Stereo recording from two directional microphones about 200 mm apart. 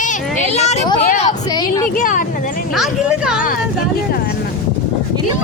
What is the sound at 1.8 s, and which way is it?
Speech, 40° left (ahead or behind).